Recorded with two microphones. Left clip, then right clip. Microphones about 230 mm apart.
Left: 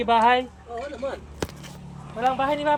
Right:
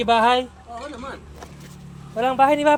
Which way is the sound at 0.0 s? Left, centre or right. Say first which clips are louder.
Right 2 dB; right.